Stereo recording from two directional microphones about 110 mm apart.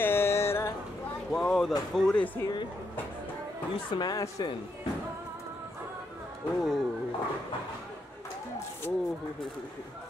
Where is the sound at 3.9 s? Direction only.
40° left (ahead or behind).